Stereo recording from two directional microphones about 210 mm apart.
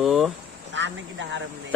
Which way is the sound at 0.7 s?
60° right (ahead or behind).